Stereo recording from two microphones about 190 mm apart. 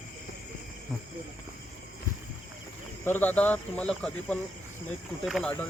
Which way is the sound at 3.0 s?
10° left (ahead or behind).